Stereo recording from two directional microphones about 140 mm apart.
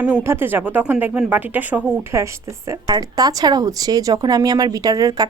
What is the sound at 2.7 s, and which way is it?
A woman's voice, 25° right (ahead or behind).